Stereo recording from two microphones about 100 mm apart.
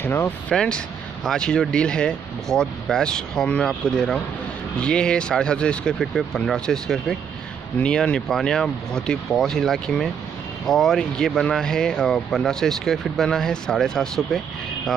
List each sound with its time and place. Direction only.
0.0 s speech: 25° left (ahead or behind)
0.5 s speech: 10° left (ahead or behind)